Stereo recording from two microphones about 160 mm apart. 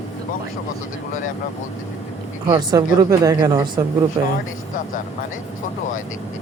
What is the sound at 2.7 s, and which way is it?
Speech, 20° right (ahead or behind).